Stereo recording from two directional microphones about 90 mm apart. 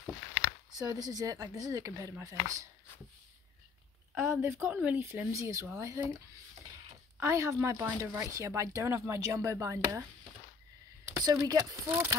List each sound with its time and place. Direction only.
0.7 s speech: 45° right (ahead or behind)
4.1 s speech: 30° right (ahead or behind)
7.2 s speech: 35° right (ahead or behind)
11.2 s speech: 45° right (ahead or behind)
11.9 s speech: 25° right (ahead or behind)